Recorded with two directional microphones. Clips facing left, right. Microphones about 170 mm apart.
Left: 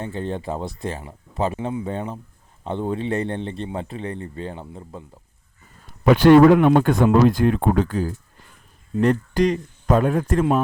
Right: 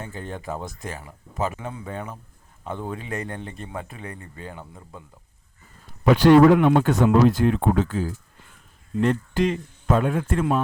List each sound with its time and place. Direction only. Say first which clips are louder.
0.0 s speech: left 6 dB; 25° left (ahead or behind)
6.1 s speech: left 2 dB; 55° left (ahead or behind)